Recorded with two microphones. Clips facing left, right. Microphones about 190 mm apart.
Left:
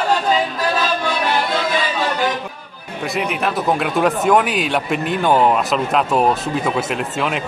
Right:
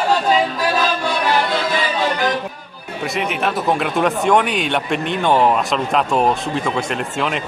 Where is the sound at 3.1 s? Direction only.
Centre (ahead or behind).